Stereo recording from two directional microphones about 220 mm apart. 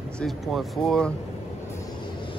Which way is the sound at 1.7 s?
20° left (ahead or behind).